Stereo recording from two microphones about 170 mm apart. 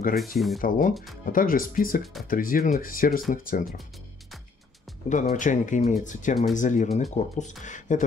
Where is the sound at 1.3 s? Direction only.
55° left (ahead or behind).